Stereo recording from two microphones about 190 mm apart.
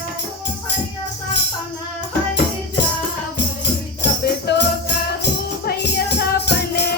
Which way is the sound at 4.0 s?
65° left (ahead or behind).